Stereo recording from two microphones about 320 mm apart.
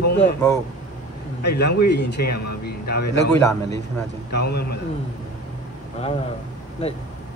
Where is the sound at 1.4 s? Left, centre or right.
Left.